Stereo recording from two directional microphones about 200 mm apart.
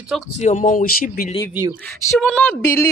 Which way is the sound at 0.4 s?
35° left (ahead or behind).